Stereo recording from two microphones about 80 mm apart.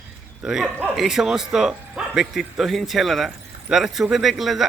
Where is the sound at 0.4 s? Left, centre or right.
Centre.